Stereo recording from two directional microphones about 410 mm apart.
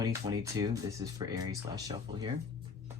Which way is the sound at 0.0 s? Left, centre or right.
Centre.